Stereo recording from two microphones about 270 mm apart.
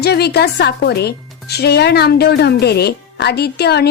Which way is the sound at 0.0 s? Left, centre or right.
Left.